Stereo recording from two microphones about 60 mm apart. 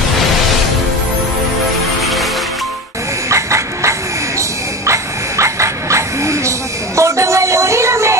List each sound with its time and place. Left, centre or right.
3.3 s a sound: right
4.4 s dog: right
7.0 s music: right